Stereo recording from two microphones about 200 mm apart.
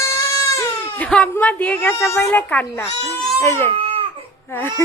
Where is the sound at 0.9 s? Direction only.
5° left (ahead or behind).